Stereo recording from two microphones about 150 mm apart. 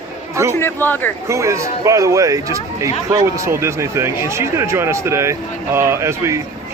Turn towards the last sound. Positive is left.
turn(degrees=-20)  # may be behind; listen again after turning